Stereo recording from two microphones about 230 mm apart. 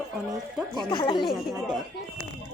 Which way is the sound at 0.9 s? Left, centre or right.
Left.